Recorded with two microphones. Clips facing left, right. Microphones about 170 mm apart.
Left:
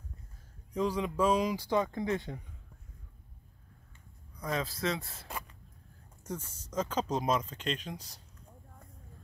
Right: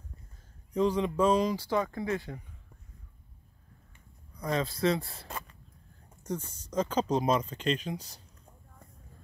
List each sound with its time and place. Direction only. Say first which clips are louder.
0.7 s speech: right 4 dB; 5° left (ahead or behind); by 2.3 s 20° left (ahead or behind)
4.5 s speech: right 5 dB; 5° left (ahead or behind)